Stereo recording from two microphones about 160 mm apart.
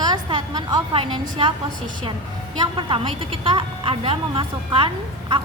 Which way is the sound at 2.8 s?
30° right (ahead or behind).